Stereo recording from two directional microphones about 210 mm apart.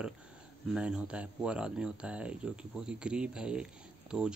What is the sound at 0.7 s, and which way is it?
Speech, 5° right (ahead or behind).